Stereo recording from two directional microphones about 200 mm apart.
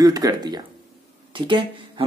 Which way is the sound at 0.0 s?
20° right (ahead or behind).